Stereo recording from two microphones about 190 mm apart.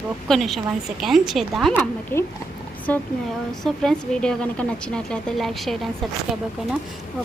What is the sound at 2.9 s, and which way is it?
Speech, 5° left (ahead or behind).